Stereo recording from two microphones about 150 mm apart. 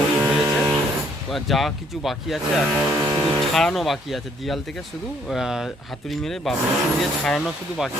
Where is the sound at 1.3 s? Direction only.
Centre (ahead or behind).